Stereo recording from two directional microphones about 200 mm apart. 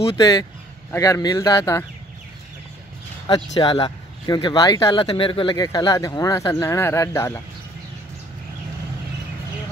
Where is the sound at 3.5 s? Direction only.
20° left (ahead or behind).